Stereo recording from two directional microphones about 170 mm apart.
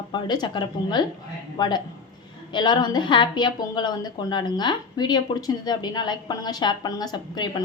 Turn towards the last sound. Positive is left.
turn(degrees=25)  # may be behind; listen again after turning